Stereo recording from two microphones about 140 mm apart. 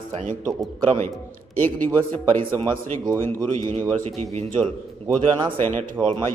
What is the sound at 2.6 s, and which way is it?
Speech, 30° right (ahead or behind).